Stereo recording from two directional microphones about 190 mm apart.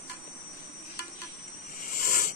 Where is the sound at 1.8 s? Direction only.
45° left (ahead or behind).